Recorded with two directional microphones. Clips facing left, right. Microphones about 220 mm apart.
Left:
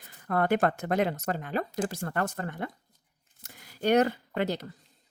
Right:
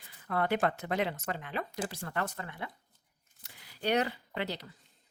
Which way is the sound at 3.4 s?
50° left (ahead or behind).